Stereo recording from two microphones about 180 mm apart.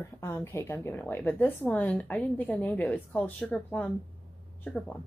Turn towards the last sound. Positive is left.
turn(degrees=5)  # may be behind; listen again after turning